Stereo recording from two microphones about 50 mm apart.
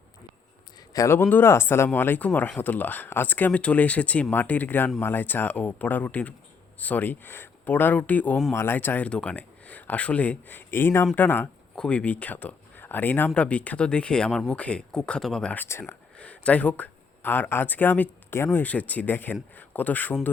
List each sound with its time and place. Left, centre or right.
1.2 s speech: left
1.5 s speech: left
1.9 s speech: left
9.0 s speech: left
10.7 s speech: left
11.8 s speech: left
13.3 s speech: left
14.3 s speech: centre
14.5 s speech: left
15.5 s speech: left
16.1 s speech: left